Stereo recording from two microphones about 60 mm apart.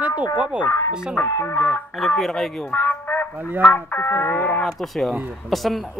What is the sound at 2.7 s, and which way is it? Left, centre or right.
Music, left.